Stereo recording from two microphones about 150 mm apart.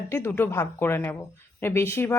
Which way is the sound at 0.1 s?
15° left (ahead or behind).